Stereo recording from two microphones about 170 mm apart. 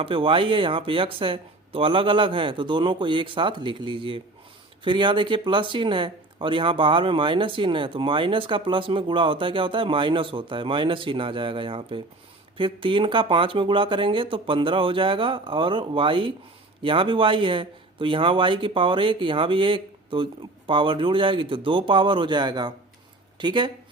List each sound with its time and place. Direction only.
0.0 s speech: 30° right (ahead or behind)